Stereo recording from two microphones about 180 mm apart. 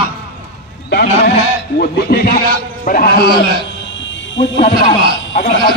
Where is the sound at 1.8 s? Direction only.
60° left (ahead or behind).